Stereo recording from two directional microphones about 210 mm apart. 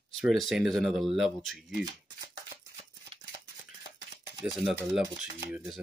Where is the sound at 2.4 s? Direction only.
25° right (ahead or behind).